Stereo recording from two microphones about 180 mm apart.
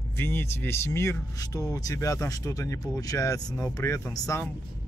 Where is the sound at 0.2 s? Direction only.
10° left (ahead or behind).